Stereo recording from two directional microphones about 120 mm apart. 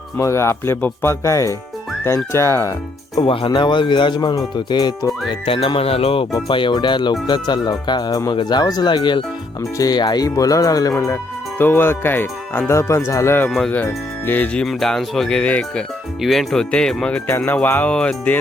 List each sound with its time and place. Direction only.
0.2 s speech: 25° left (ahead or behind)
3.2 s speech: 45° left (ahead or behind)
5.3 s music: 50° left (ahead or behind)
6.5 s speech: 40° left (ahead or behind)
10.9 s speech: 20° left (ahead or behind)